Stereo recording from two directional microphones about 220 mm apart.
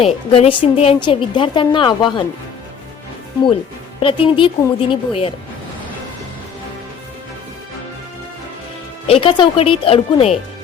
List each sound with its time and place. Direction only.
0.3 s a woman's voice: 25° left (ahead or behind)
4.0 s a woman's voice: 25° left (ahead or behind)
9.0 s a woman's voice: 25° left (ahead or behind)